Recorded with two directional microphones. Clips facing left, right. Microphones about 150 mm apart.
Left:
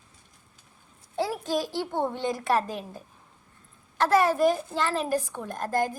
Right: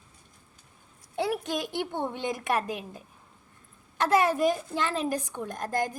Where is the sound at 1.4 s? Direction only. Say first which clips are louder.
Left 3 dB; 20° right (ahead or behind).